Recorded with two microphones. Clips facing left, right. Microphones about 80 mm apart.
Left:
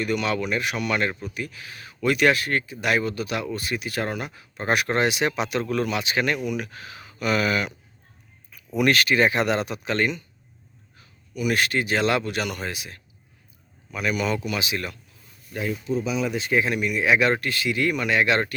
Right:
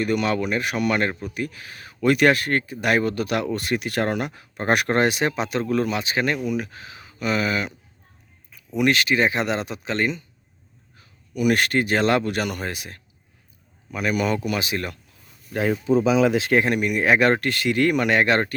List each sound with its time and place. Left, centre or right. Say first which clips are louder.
0.0 s a man's voice: right 3 dB; right
11.3 s speech: right 3 dB; right
15.5 s speech: right 6 dB; right
16.6 s speech: right 3 dB; right
18.2 s speech: right 2 dB; right